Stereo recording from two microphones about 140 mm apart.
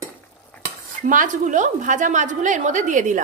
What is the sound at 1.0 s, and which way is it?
A woman's voice, 70° right (ahead or behind).